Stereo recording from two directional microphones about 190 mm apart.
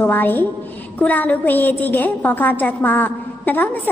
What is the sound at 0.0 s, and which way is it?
A woman's voice, 10° left (ahead or behind).